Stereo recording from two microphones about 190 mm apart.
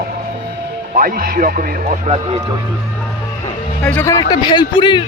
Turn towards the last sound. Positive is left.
turn(degrees=25)  # may be behind; listen again after turning